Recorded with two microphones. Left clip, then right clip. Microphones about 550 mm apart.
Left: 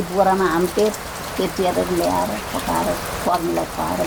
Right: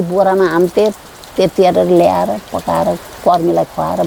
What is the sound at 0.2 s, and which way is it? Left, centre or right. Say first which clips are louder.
Speech: right 4 dB; right.